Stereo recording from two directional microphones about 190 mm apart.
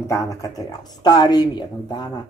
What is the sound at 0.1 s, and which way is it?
A woman's voice, 15° left (ahead or behind).